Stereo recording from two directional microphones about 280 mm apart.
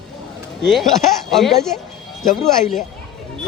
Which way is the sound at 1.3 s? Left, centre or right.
Centre.